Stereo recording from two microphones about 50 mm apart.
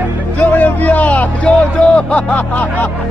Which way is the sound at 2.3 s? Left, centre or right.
Left.